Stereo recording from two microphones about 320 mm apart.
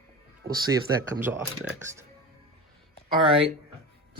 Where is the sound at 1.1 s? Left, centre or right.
Centre.